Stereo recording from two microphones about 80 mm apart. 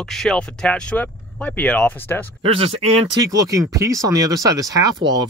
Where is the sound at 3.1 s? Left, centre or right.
Right.